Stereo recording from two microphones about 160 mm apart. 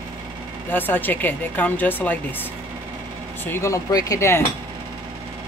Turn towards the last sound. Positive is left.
turn(degrees=15)  # may be behind; listen again after turning